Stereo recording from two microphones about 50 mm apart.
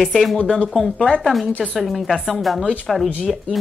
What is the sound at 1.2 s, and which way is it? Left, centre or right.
A woman's voice, centre.